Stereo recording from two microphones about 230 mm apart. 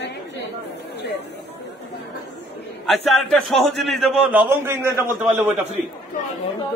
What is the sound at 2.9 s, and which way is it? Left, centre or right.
A man's voice, centre.